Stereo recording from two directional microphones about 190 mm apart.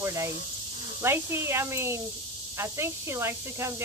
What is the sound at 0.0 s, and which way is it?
Speech, 15° right (ahead or behind).